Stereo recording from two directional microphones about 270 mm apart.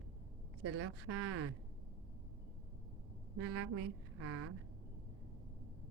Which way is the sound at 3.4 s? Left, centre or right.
Right.